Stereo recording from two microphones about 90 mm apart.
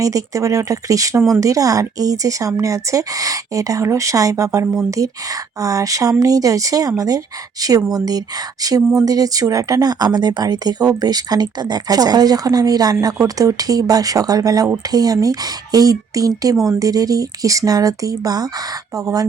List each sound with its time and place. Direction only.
0.0 s speech: 40° right (ahead or behind)